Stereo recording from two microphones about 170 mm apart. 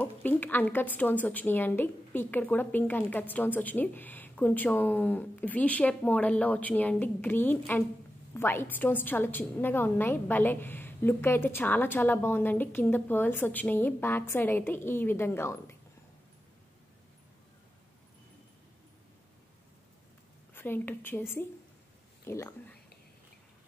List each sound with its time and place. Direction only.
0.0 s a woman's voice: 10° left (ahead or behind)
20.5 s a woman's voice: 10° left (ahead or behind)